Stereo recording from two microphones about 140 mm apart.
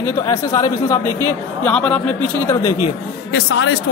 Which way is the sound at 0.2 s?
25° left (ahead or behind).